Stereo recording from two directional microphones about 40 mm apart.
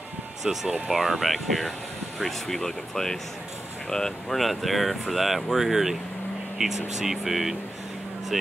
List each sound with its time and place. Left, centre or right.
0.8 s speech: centre
4.4 s speech: centre